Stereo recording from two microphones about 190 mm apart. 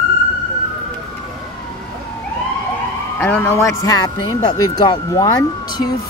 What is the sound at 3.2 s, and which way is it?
Speech, 10° left (ahead or behind).